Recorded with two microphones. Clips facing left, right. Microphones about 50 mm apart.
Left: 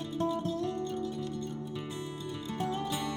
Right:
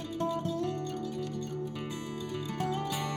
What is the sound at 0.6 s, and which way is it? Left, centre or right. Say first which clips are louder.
Music: even; right.